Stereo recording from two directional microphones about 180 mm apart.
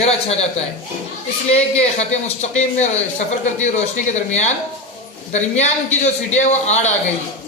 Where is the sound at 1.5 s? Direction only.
35° left (ahead or behind).